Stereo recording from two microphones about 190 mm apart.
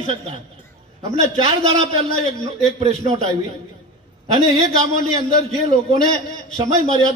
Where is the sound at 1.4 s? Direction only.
30° right (ahead or behind).